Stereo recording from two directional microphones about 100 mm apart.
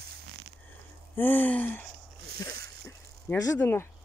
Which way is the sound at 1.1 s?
20° left (ahead or behind).